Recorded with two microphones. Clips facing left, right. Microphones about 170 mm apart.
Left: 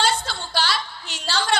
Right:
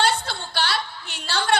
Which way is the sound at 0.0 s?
60° right (ahead or behind).